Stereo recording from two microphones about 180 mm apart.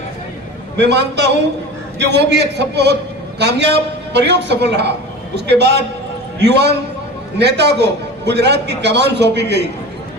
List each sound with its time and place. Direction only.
0.8 s a man's voice: 70° right (ahead or behind)